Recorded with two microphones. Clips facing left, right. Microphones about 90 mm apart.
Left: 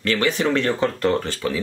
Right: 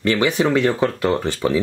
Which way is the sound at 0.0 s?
15° right (ahead or behind).